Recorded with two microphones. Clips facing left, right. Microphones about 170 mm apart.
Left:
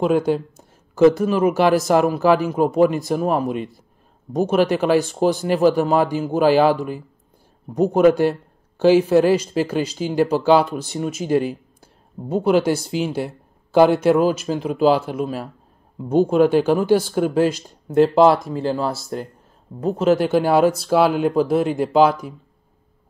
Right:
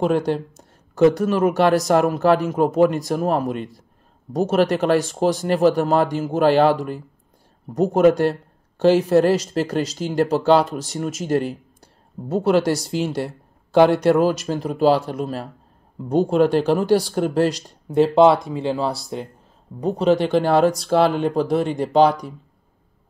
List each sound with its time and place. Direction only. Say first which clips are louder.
0.0 s speech: left 2 dB; centre (ahead or behind)